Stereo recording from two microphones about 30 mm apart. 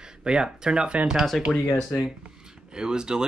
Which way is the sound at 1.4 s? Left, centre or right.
Centre.